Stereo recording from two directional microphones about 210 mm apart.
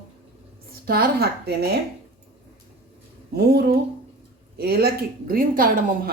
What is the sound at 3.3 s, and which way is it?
A woman's voice, 50° right (ahead or behind).